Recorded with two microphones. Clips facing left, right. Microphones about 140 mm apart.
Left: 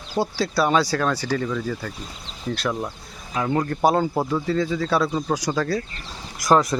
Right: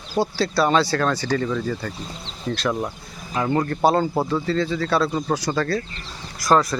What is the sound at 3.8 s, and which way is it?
Speech, 10° left (ahead or behind).